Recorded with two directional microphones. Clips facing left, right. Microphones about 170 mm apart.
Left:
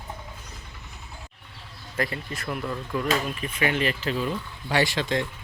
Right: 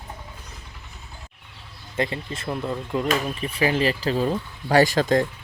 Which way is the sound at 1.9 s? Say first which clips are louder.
Right 3 dB; 25° right (ahead or behind).